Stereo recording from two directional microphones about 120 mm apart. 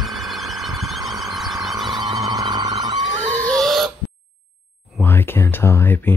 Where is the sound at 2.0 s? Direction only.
35° right (ahead or behind).